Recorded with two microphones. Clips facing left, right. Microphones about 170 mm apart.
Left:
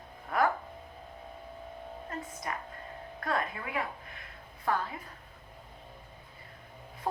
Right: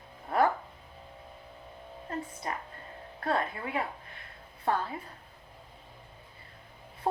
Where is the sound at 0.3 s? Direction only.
30° right (ahead or behind).